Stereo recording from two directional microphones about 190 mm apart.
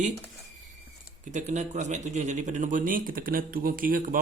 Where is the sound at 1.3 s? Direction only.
40° right (ahead or behind).